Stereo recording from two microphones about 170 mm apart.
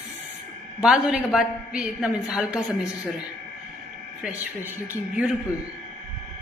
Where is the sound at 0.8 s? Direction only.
5° right (ahead or behind).